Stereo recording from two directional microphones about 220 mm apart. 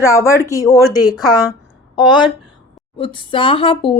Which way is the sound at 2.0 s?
20° left (ahead or behind).